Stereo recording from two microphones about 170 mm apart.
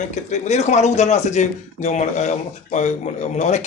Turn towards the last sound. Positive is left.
turn(degrees=40)  # may be behind; listen again after turning